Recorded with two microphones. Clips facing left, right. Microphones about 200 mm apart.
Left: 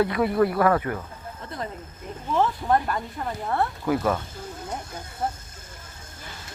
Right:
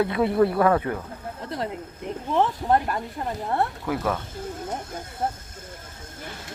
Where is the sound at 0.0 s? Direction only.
25° right (ahead or behind).